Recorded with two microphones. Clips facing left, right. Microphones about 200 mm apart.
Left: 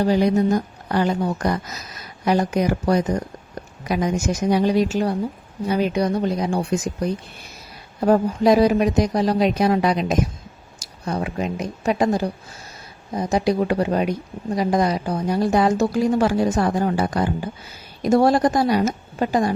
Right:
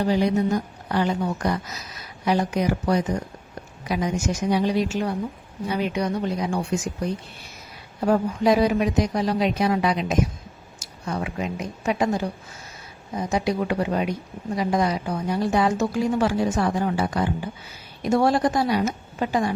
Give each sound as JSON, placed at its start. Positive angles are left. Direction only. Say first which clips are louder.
{"t": 0.1, "sound": "a woman's voice", "louder": "left 2 dB", "side_deg": 45}
{"t": 8.0, "sound": "a woman's voice", "louder": "left 4 dB", "side_deg": 40}